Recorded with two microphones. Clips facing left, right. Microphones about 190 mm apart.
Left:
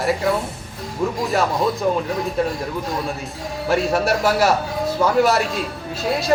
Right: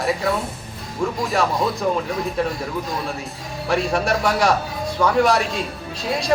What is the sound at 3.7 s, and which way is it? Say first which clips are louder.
A man's voice: left 2 dB; 5° left (ahead or behind).